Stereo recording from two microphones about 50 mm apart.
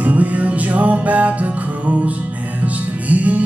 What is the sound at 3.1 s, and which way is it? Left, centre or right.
Music, right.